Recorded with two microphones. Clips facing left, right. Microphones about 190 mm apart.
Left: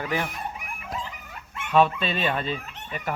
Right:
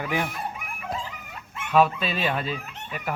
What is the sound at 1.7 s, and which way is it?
Speech, 5° right (ahead or behind).